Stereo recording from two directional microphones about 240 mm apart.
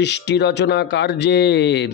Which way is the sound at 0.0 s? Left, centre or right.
Left.